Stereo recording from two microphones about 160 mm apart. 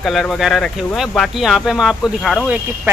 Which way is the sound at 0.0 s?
Centre (ahead or behind).